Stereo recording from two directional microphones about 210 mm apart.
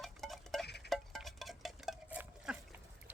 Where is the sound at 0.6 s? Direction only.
50° left (ahead or behind).